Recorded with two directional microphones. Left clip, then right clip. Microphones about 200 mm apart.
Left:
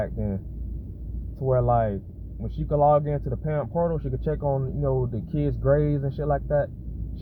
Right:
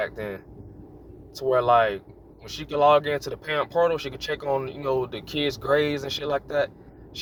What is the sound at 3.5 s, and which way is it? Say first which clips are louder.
Speech: right 4 dB; 40° right (ahead or behind).